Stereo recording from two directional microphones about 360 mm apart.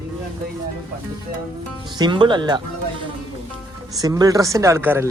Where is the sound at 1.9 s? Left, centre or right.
Centre.